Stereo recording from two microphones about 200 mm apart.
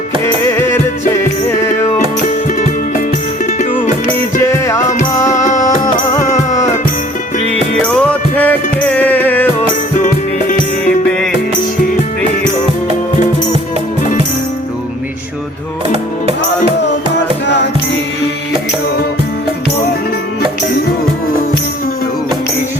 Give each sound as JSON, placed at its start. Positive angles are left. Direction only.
{"t": 0.4, "sound": "music", "side_deg": 15}
{"t": 4.4, "sound": "music", "side_deg": 15}
{"t": 5.3, "sound": "music", "side_deg": 40}
{"t": 5.6, "sound": "music", "side_deg": 15}
{"t": 7.8, "sound": "music", "side_deg": 5}
{"t": 10.8, "sound": "music", "side_deg": 0}